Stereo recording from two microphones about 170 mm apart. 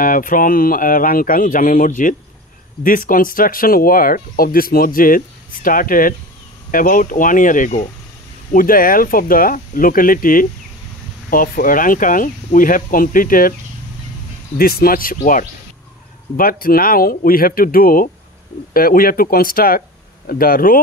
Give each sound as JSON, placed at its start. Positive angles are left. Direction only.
{"t": 0.0, "sound": "speech", "side_deg": 55}
{"t": 14.6, "sound": "speech", "side_deg": 60}